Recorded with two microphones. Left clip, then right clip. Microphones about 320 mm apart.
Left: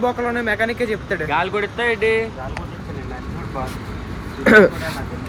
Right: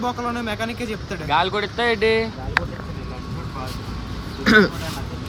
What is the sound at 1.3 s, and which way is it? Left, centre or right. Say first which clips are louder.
Speech: right 2 dB; right.